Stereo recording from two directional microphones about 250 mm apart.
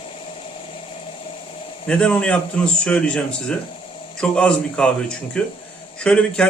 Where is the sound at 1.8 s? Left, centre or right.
Centre.